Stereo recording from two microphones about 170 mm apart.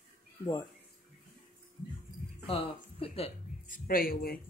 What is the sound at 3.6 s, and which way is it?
Speech, 55° left (ahead or behind).